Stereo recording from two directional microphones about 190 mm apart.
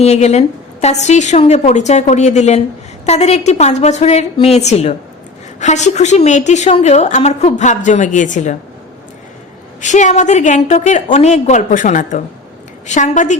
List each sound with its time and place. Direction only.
0.0 s a woman's voice: 35° left (ahead or behind)
9.8 s a woman's voice: 40° left (ahead or behind)